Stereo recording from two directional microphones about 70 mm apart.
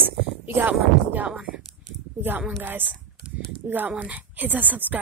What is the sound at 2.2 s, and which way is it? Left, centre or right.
Speech, right.